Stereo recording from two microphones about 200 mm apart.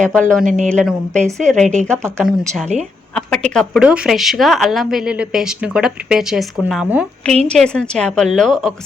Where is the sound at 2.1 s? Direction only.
10° right (ahead or behind).